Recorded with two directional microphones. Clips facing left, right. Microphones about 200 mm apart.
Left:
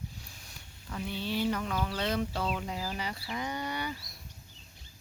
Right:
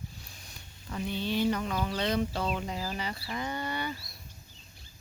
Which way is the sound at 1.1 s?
5° left (ahead or behind).